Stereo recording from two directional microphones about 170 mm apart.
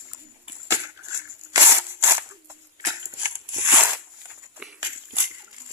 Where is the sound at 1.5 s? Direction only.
15° right (ahead or behind).